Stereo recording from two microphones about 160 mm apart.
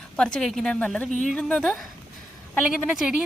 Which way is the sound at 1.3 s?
5° left (ahead or behind).